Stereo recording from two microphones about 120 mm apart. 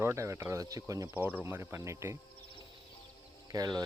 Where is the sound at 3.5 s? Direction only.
35° right (ahead or behind).